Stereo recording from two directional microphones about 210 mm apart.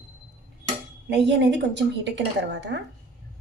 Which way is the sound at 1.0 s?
55° right (ahead or behind).